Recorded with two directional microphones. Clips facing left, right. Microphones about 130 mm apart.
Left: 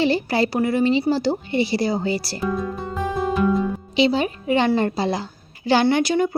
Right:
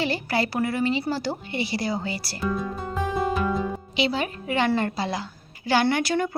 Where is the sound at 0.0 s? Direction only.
25° left (ahead or behind).